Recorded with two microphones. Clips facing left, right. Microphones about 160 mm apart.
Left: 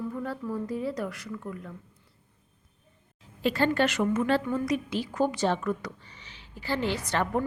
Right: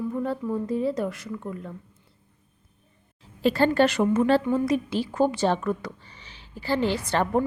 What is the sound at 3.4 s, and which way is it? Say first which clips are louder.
A woman's voice: right 5 dB; 35° right (ahead or behind).